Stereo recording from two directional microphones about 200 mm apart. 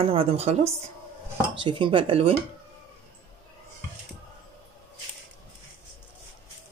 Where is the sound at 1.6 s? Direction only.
25° right (ahead or behind).